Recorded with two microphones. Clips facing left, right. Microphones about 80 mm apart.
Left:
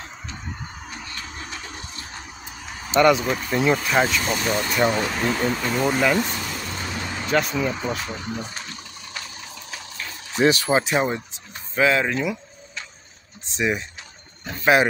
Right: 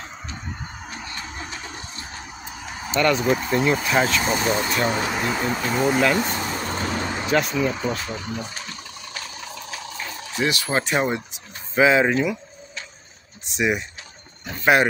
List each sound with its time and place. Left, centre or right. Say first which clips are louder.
2.9 s speech: left 4 dB; centre
3.2 s speech: right 3 dB; centre
4.2 s speech: right 2 dB; right; by 6.2 s centre
6.2 s vehicle: right 4 dB; right
7.2 s speech: even; centre
10.4 s speech: left 5 dB; left
10.7 s speech: left 1 dB; centre
11.3 s a sound: right 3 dB; centre
13.6 s speech: right 1 dB; centre